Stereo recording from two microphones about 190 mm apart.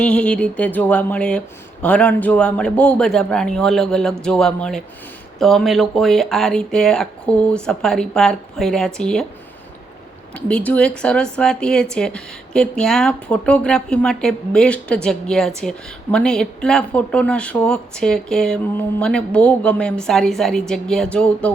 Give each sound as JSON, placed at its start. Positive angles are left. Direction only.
{"t": 0.0, "sound": "a sound", "side_deg": 5}
{"t": 1.8, "sound": "speech", "side_deg": 5}
{"t": 10.3, "sound": "speech", "side_deg": 5}